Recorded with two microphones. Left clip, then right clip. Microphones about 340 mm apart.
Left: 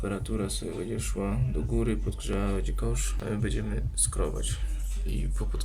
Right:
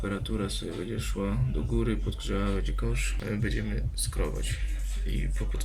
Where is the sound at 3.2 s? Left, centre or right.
Left.